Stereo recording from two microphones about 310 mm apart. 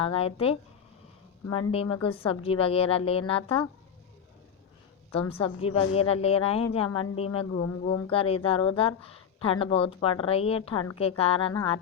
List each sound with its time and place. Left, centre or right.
0.0 s speech: centre
5.3 s speech: centre